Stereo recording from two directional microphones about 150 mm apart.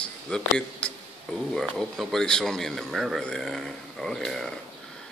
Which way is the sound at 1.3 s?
Centre (ahead or behind).